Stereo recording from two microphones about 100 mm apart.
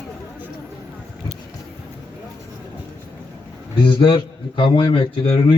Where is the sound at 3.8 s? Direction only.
55° left (ahead or behind).